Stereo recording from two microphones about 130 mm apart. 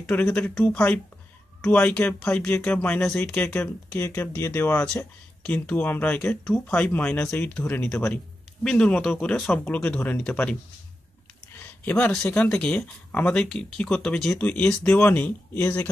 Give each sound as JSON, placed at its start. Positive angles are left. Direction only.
{"t": 0.0, "sound": "speech", "side_deg": 10}
{"t": 11.6, "sound": "speech", "side_deg": 15}